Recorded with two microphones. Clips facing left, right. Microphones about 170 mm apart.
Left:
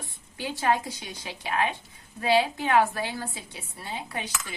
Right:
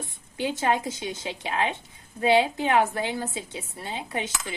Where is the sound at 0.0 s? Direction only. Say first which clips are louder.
Right 6 dB; 20° right (ahead or behind).